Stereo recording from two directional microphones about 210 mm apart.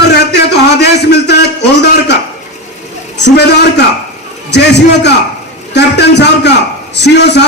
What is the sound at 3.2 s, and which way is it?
A man's voice, 55° left (ahead or behind).